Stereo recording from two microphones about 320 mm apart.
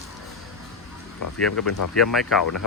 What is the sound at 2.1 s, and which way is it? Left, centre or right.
Speech, centre.